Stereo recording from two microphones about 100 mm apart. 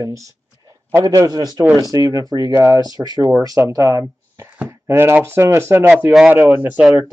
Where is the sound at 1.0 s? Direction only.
35° right (ahead or behind).